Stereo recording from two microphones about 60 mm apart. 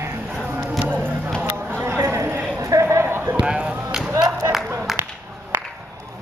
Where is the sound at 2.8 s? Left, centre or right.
Right.